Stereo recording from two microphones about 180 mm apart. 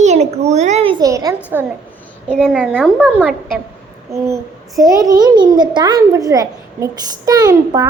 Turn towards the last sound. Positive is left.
turn(degrees=-20)  # may be behind; listen again after turning